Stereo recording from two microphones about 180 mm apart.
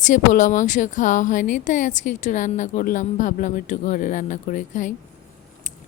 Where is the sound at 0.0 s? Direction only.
45° left (ahead or behind).